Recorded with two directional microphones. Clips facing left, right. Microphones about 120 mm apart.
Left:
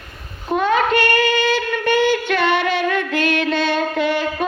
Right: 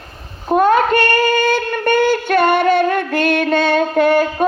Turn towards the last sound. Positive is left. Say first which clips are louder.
# right 6 dB
turn(degrees=-50)  # may be behind; listen again after turning